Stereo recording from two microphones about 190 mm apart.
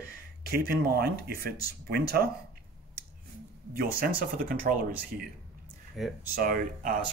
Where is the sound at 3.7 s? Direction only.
50° right (ahead or behind).